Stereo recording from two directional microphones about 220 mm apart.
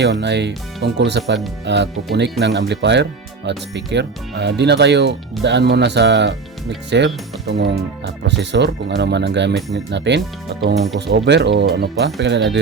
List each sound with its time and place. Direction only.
0.0 s speech: 50° right (ahead or behind)